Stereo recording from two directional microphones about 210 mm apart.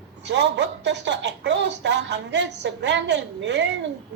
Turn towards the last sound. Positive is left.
turn(degrees=-55)  # may be behind; listen again after turning